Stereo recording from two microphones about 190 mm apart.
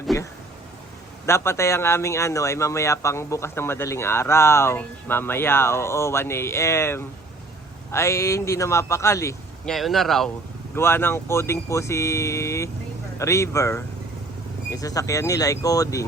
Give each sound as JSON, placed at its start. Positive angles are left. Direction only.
{"t": 1.3, "sound": "speech", "side_deg": 15}
{"t": 9.6, "sound": "speech", "side_deg": 0}
{"t": 10.8, "sound": "speech", "side_deg": 10}